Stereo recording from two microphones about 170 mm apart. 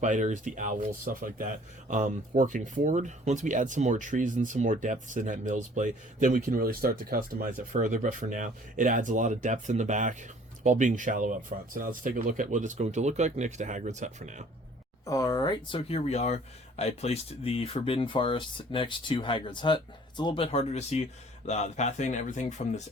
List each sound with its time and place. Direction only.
0.0 s speech: 45° right (ahead or behind)
15.0 s speech: 20° left (ahead or behind); by 22.8 s 45° left (ahead or behind)